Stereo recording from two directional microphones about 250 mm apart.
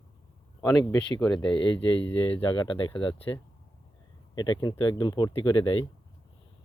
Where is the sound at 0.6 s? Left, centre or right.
Centre.